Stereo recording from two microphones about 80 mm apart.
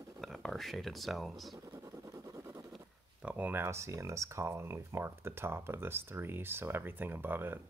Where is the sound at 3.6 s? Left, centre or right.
Right.